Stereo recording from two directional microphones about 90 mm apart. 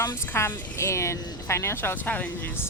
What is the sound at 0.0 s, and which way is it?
Speech, 25° left (ahead or behind).